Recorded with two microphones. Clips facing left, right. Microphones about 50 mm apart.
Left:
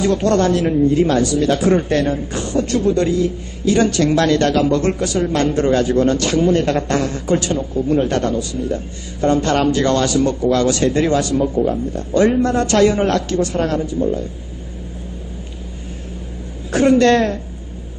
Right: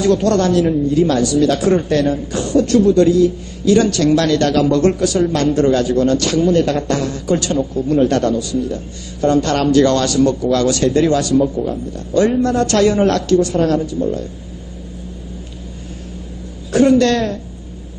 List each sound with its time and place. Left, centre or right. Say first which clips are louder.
0.0 s a man's voice: right 1 dB; left
7.7 s a man's voice: right 2 dB; centre
12.7 s a man's voice: even; centre
13.2 s a man's voice: right 5 dB; left
16.7 s a woman's voice: even; left